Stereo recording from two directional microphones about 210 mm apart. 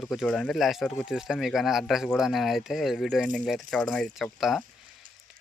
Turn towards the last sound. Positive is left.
turn(degrees=0)  # may be behind; listen again after turning